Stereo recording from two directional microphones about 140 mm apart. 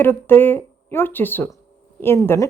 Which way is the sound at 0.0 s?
15° left (ahead or behind).